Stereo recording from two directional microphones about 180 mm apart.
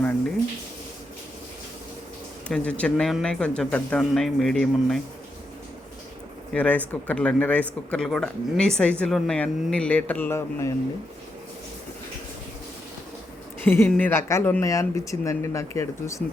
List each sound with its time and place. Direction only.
2.5 s speech: 5° left (ahead or behind)
6.5 s speech: 10° left (ahead or behind)
13.7 s speech: 10° left (ahead or behind)